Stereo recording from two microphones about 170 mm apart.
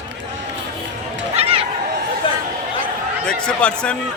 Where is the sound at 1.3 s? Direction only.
35° right (ahead or behind).